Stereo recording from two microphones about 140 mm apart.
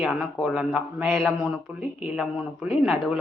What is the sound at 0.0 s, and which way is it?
Speech, 5° right (ahead or behind).